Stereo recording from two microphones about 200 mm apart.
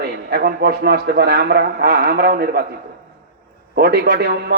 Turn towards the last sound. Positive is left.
turn(degrees=-55)  # may be behind; listen again after turning